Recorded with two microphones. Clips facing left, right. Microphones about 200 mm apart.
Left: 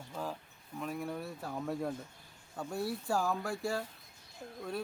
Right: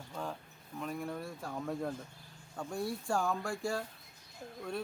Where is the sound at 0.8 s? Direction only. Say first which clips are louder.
Left 1 dB; centre (ahead or behind).